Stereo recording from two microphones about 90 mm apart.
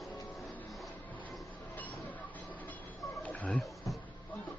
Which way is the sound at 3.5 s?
Centre (ahead or behind).